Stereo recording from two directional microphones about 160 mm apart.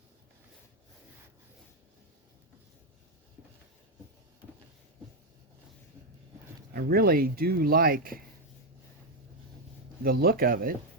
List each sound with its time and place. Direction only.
6.7 s speech: 70° right (ahead or behind)
10.0 s speech: 70° right (ahead or behind)